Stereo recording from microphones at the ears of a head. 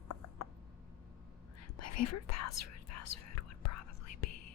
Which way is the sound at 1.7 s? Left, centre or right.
Left.